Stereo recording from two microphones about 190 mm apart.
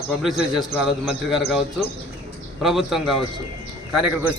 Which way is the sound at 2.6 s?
Centre (ahead or behind).